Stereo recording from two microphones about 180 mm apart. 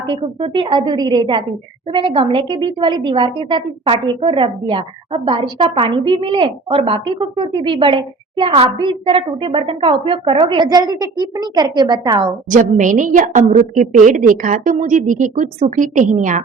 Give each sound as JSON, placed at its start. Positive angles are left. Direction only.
{"t": 0.0, "sound": "a woman's voice", "side_deg": -30}
{"t": 12.5, "sound": "a woman's voice", "side_deg": -45}